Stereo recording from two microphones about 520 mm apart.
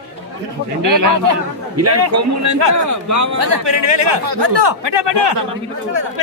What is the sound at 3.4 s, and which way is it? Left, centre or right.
Speech, right.